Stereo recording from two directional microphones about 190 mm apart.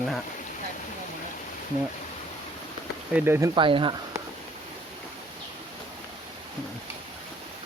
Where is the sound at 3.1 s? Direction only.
10° right (ahead or behind).